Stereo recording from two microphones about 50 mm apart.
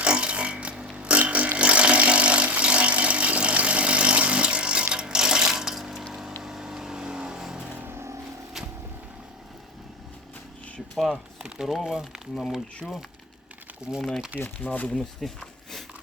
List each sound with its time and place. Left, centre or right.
0.0 s a sound: right; by 6.1 s centre
6.4 s vehicle: centre
7.8 s vehicle: right
10.9 s speech: centre
13.9 s speech: right
14.3 s speech: left
14.7 s speech: left
14.9 s speech: centre